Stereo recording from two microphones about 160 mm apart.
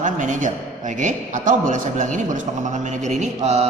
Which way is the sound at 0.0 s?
55° right (ahead or behind).